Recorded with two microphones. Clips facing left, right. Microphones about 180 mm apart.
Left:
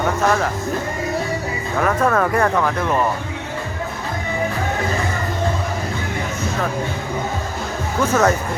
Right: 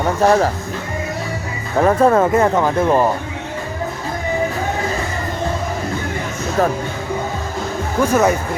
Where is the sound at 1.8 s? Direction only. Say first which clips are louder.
Right 5 dB; 30° right (ahead or behind).